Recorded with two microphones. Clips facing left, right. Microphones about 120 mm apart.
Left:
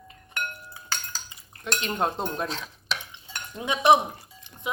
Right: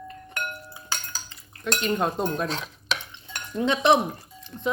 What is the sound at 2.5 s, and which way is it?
Stir, 70° right (ahead or behind).